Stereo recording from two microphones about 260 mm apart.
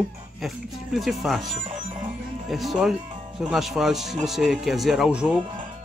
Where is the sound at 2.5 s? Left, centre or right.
Centre.